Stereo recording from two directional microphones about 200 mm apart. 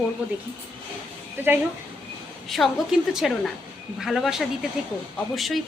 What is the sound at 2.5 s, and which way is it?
A woman's voice, centre (ahead or behind).